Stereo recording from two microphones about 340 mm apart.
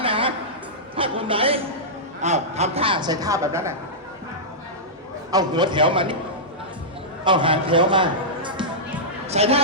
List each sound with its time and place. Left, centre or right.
0.0 s a sound: centre
0.9 s music: centre
2.2 s a woman's voice: centre
5.3 s a woman's voice: centre
7.3 s a man's voice: centre